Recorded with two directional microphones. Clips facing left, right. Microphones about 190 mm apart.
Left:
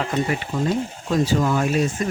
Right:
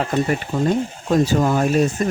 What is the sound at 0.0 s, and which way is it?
Speech, 45° right (ahead or behind).